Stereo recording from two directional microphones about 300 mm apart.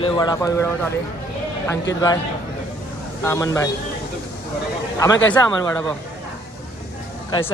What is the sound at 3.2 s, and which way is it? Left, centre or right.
Speech, centre.